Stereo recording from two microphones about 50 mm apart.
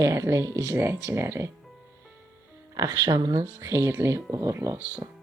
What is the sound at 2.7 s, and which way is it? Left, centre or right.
Speech, right.